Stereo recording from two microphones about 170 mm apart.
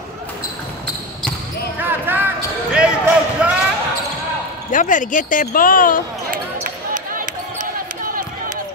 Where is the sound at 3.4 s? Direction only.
5° right (ahead or behind).